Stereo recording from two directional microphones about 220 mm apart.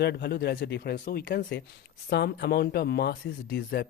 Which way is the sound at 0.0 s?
50° left (ahead or behind).